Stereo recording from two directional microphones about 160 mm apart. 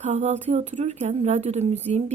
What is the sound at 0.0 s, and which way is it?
A woman's voice, 45° right (ahead or behind).